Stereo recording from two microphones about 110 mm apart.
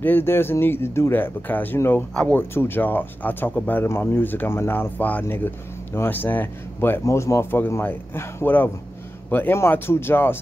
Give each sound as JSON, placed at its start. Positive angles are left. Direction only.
{"t": 0.0, "sound": "speech", "side_deg": 20}